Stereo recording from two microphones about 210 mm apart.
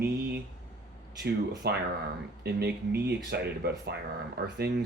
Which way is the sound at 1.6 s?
50° right (ahead or behind).